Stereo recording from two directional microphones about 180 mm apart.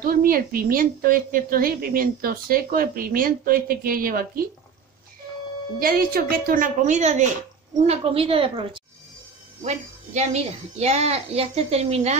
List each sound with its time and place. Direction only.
0.0 s a woman's voice: 55° right (ahead or behind)
5.8 s a woman's voice: 55° right (ahead or behind); by 12.2 s 35° right (ahead or behind)